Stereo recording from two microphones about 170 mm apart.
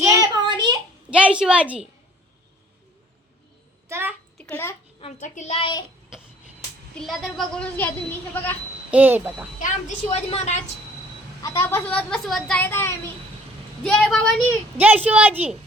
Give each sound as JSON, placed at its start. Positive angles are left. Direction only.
{"t": 0.0, "sound": "child singing", "side_deg": -20}
{"t": 1.1, "sound": "a woman's voice", "side_deg": -5}
{"t": 3.8, "sound": "bathtub", "side_deg": -15}
{"t": 4.4, "sound": "bathtub", "side_deg": 10}
{"t": 5.2, "sound": "a child's voice", "side_deg": 45}
{"t": 6.9, "sound": "speech", "side_deg": 0}
{"t": 8.9, "sound": "a woman's voice", "side_deg": -10}
{"t": 9.6, "sound": "a woman's voice", "side_deg": 45}
{"t": 11.4, "sound": "speech", "side_deg": 15}
{"t": 14.8, "sound": "a woman's voice", "side_deg": -10}